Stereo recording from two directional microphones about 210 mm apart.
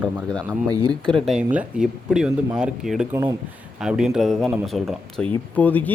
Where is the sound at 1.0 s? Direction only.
Centre (ahead or behind).